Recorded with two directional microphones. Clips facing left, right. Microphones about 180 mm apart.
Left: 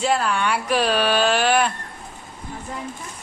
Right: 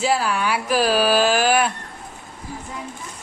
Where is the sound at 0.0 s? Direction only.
5° right (ahead or behind).